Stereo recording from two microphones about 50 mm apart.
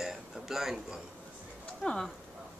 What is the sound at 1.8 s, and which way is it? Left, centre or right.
Speech, centre.